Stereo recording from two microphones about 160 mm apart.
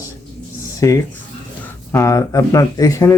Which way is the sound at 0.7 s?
20° left (ahead or behind).